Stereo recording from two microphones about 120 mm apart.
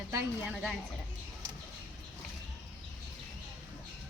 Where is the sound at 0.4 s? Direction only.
5° right (ahead or behind).